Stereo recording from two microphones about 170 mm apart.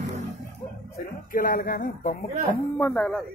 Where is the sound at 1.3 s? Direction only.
55° left (ahead or behind).